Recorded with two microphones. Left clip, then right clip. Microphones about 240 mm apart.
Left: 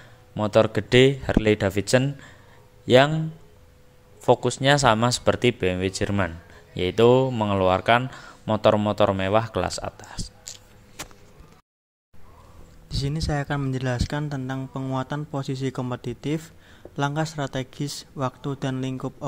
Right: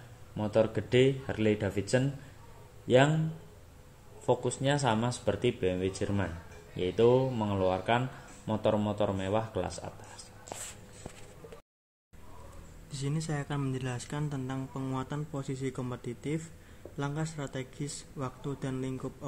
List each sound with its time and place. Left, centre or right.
0.4 s speech: left
4.3 s speech: left
12.9 s speech: left